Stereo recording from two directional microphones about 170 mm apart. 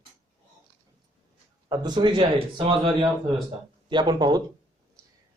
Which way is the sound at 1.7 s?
25° right (ahead or behind).